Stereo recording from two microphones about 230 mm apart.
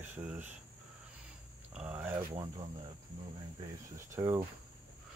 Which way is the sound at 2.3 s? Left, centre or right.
Right.